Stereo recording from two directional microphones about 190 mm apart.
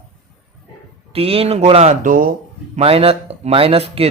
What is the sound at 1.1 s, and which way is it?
Speech, 30° right (ahead or behind).